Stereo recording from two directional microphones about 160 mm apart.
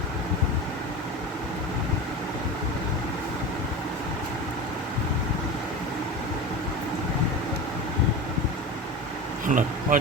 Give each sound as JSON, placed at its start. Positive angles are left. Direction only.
{"t": 9.5, "sound": "speech", "side_deg": -55}